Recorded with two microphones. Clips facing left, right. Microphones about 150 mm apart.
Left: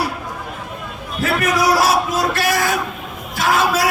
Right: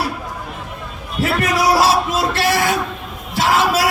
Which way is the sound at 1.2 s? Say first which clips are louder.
Even; 30° right (ahead or behind).